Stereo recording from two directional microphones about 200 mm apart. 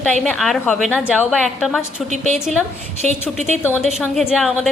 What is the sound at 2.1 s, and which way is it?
Speech, 35° right (ahead or behind).